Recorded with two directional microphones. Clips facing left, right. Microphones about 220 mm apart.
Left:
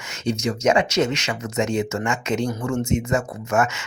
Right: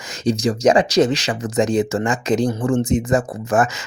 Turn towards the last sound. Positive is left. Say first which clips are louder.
# right 3 dB
turn(degrees=-35)  # may be behind; listen again after turning